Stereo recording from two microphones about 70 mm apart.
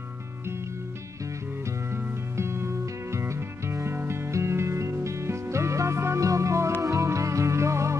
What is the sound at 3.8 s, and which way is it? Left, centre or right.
Music, right.